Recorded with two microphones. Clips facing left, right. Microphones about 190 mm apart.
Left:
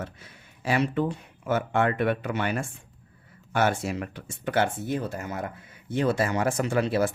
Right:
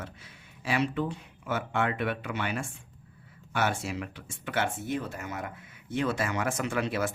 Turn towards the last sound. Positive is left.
turn(degrees=35)  # may be behind; listen again after turning